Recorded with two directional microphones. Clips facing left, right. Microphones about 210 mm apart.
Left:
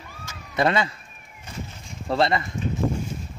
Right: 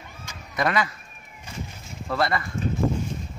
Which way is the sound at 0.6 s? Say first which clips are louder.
Left 3 dB; 25° left (ahead or behind).